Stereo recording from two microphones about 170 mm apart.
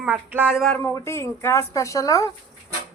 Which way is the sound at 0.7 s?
15° left (ahead or behind).